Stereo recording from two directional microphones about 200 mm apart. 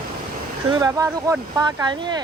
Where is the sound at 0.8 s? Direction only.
15° right (ahead or behind).